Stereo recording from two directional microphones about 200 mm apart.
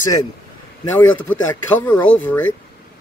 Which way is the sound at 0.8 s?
75° left (ahead or behind).